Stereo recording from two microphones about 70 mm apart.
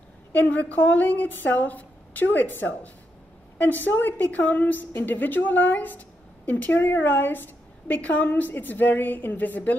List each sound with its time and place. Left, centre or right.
0.3 s a woman's voice: left